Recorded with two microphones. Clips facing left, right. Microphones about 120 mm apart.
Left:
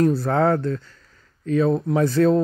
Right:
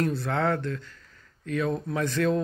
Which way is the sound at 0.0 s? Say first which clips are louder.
Left 8 dB; 40° left (ahead or behind).